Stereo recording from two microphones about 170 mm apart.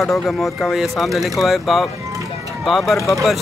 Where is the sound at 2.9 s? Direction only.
15° left (ahead or behind).